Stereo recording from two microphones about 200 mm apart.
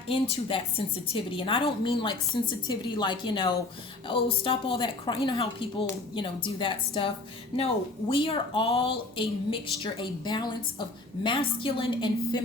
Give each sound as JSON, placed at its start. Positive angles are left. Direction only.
{"t": 0.1, "sound": "speech", "side_deg": 25}